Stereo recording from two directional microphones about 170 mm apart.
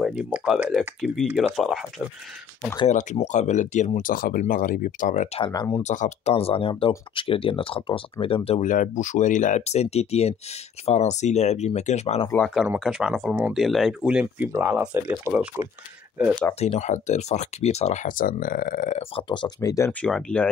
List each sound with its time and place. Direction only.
0.0 s speech: 5° right (ahead or behind)
2.9 s speech: 45° left (ahead or behind)
5.4 s speech: 25° left (ahead or behind)
5.8 s speech: 45° left (ahead or behind)
8.5 s speech: 45° left (ahead or behind)
12.3 s speech: 5° left (ahead or behind); by 15.7 s 10° right (ahead or behind)
16.5 s speech: 40° left (ahead or behind)
19.1 s speech: 30° left (ahead or behind)
19.9 s speech: 5° left (ahead or behind)